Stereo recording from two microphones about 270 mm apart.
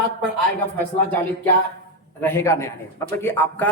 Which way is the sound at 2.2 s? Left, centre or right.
Centre.